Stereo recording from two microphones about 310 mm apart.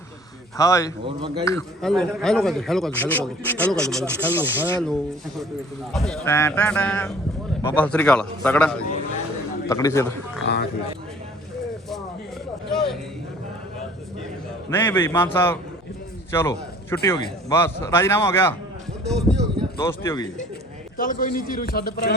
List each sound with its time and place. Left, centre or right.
0.5 s a man's voice: centre
1.0 s a man's voice: centre
1.5 s a man's voice: centre
10.4 s speech: left
12.7 s a sound: centre
14.7 s a man's voice: centre
19.7 s a man's voice: centre
20.9 s a man's voice: left